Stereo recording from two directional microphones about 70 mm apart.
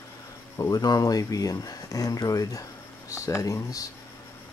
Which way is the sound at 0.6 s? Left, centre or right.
Left.